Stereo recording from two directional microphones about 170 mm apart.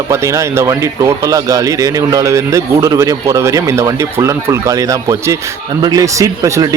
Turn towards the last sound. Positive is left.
turn(degrees=-20)  # may be behind; listen again after turning